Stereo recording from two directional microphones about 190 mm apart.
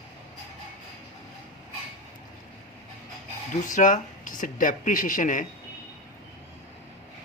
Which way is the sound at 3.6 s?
40° left (ahead or behind).